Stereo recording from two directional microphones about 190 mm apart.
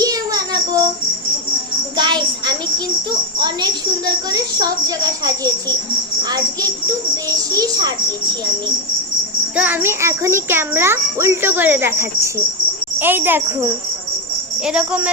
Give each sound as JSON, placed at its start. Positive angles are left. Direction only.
{"t": 0.0, "sound": "child singing", "side_deg": -20}
{"t": 2.0, "sound": "a child's voice", "side_deg": -25}
{"t": 7.3, "sound": "a child's voice", "side_deg": -20}
{"t": 9.6, "sound": "a child's voice", "side_deg": -10}